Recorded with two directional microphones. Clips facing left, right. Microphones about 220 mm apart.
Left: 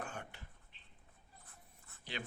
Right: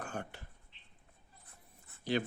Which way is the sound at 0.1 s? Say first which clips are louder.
Right 6 dB; 40° right (ahead or behind).